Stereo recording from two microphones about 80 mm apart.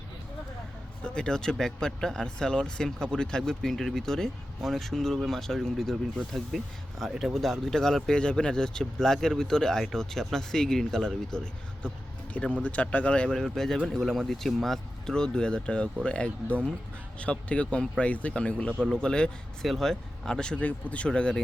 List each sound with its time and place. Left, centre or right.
1.0 s speech: centre